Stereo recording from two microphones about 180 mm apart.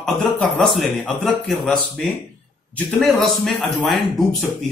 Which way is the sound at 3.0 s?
Centre (ahead or behind).